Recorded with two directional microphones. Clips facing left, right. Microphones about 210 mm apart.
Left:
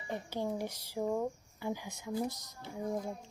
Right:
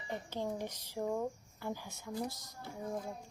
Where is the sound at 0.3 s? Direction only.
10° left (ahead or behind).